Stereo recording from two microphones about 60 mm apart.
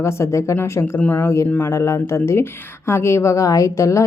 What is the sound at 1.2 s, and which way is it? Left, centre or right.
A woman's voice, left.